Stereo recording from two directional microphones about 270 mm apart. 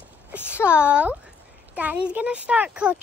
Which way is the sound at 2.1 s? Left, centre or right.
Centre.